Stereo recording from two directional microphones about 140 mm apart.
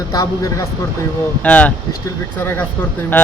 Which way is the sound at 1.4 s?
10° left (ahead or behind).